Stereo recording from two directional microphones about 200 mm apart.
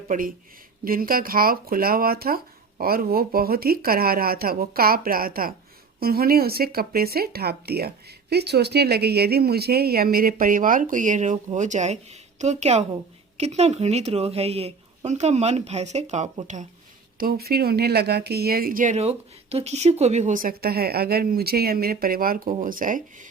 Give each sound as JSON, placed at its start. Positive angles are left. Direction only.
{"t": 0.1, "sound": "a woman's voice", "side_deg": -45}
{"t": 17.2, "sound": "speech", "side_deg": -50}